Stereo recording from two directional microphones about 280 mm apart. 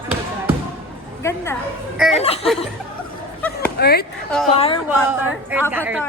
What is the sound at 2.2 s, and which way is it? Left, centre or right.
Speech, left.